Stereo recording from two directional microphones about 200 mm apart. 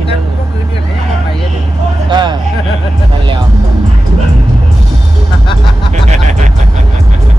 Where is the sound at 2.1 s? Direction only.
25° right (ahead or behind).